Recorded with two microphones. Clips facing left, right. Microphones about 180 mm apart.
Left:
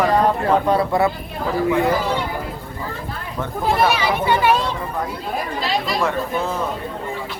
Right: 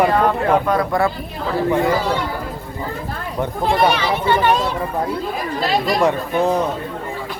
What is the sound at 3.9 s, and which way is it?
Speech, 10° left (ahead or behind).